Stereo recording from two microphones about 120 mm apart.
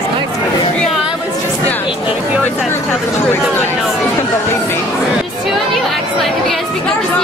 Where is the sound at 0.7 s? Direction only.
5° left (ahead or behind).